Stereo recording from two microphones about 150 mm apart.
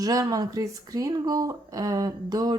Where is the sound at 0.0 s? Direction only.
25° right (ahead or behind).